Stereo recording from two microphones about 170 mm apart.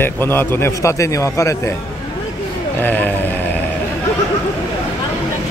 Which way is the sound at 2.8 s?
10° left (ahead or behind).